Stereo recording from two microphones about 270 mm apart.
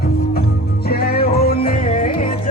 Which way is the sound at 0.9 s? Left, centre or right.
Left.